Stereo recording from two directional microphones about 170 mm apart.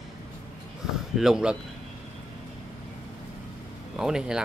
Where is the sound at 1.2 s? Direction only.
5° right (ahead or behind).